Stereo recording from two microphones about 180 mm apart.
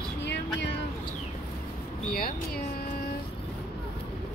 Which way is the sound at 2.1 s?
55° left (ahead or behind).